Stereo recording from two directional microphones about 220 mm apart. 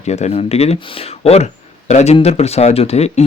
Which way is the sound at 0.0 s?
30° left (ahead or behind).